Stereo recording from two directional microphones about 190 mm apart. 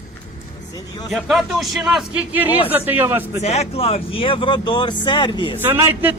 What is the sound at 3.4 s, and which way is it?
Speech, 35° left (ahead or behind).